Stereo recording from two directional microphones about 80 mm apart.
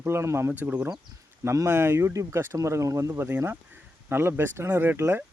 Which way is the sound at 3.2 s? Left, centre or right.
Right.